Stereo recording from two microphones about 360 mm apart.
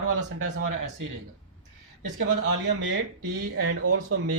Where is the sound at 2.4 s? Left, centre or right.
Right.